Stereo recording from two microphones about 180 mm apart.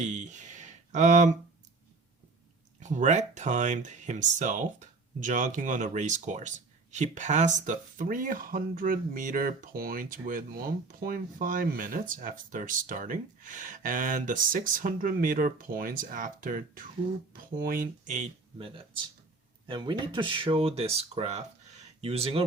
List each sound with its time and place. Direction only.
0.0 s speech: 40° right (ahead or behind)
2.8 s speech: 40° right (ahead or behind)
19.6 s speech: 25° right (ahead or behind)